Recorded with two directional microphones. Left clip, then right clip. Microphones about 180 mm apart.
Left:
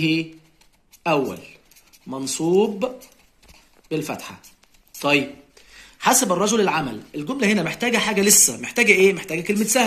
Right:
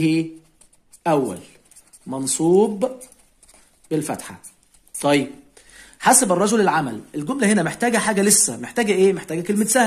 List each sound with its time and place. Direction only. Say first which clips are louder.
1.0 s speech: right 1 dB; 65° right (ahead or behind)
3.9 s speech: right 2 dB; 65° right (ahead or behind)
4.9 s a sound: right 1 dB; 60° right (ahead or behind)
5.5 s speech: even; 70° right (ahead or behind)